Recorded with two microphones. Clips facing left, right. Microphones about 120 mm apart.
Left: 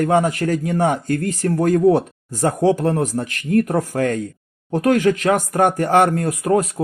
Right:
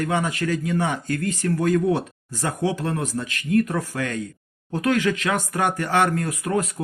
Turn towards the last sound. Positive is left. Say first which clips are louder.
# left 6 dB
turn(degrees=45)  # may be behind; listen again after turning